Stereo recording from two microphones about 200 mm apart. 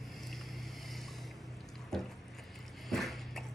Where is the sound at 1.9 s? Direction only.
Centre (ahead or behind).